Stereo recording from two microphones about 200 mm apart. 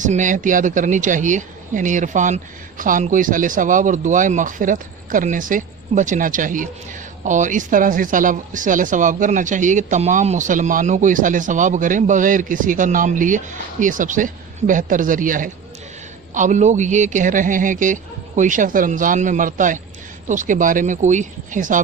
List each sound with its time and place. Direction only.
0.0 s speech: 40° right (ahead or behind)